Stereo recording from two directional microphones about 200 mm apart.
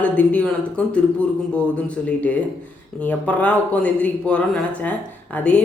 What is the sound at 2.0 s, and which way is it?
A man's voice, 5° left (ahead or behind).